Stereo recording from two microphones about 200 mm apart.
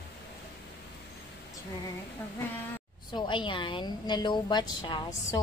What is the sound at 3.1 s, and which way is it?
A woman's voice, 25° left (ahead or behind).